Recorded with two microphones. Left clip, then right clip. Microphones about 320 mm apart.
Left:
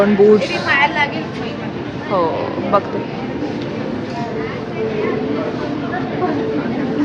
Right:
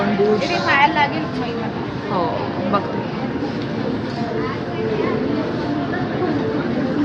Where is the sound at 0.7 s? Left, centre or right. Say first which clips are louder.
Even; right.